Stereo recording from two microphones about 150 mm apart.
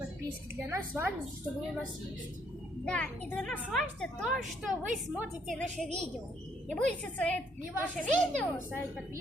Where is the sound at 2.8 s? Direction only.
10° left (ahead or behind).